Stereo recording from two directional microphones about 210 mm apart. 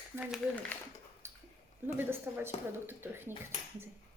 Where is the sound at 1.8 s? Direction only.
10° right (ahead or behind).